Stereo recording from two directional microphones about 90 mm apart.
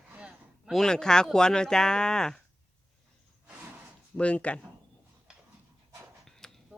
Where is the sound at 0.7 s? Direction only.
5° left (ahead or behind).